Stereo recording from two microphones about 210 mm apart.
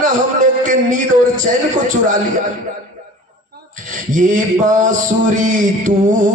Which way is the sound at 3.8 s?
40° right (ahead or behind).